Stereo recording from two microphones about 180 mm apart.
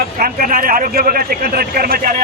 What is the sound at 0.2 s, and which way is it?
Speech, 50° right (ahead or behind).